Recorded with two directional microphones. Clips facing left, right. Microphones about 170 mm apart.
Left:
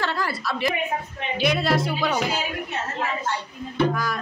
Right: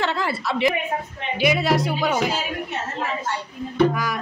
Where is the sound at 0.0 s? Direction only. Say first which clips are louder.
Right 3 dB; 20° right (ahead or behind).